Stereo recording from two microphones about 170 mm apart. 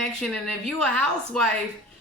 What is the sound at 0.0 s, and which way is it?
A woman's voice, 5° left (ahead or behind).